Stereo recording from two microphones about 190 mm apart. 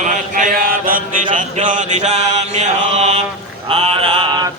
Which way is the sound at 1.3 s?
40° right (ahead or behind).